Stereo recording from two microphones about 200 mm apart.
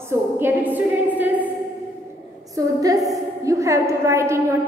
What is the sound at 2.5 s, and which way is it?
A woman's voice, 20° right (ahead or behind).